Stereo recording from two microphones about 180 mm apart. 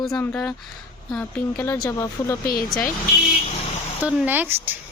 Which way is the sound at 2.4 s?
55° left (ahead or behind).